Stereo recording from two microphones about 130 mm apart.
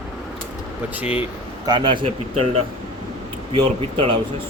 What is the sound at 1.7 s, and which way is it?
A man's voice, 35° right (ahead or behind).